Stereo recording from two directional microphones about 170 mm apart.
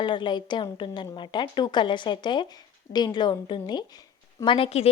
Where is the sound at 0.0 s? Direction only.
25° left (ahead or behind).